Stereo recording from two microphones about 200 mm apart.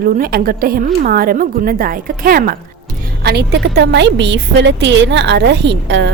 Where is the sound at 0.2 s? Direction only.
45° right (ahead or behind).